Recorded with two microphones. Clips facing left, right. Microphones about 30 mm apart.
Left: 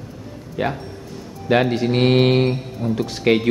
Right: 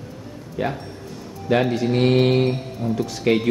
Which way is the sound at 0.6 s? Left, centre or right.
Left.